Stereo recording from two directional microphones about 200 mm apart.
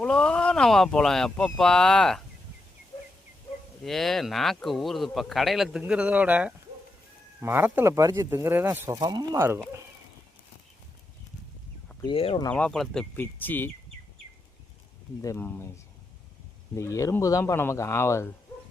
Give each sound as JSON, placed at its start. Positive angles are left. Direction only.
{"t": 0.0, "sound": "speech", "side_deg": 5}
{"t": 3.8, "sound": "speech", "side_deg": 0}
{"t": 12.0, "sound": "speech", "side_deg": 25}
{"t": 12.5, "sound": "speech", "side_deg": 5}
{"t": 15.2, "sound": "speech", "side_deg": 15}
{"t": 16.7, "sound": "speech", "side_deg": 15}